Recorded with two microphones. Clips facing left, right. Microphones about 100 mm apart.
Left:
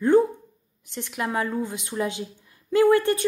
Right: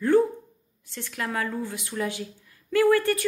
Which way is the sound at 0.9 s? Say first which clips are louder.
Left 3 dB; 20° left (ahead or behind).